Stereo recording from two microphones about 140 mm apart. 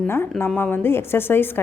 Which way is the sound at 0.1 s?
15° left (ahead or behind).